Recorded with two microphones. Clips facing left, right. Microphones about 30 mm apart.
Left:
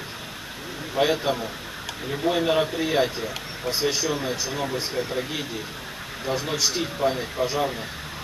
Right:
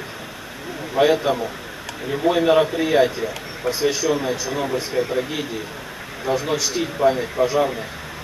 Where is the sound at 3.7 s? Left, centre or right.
Centre.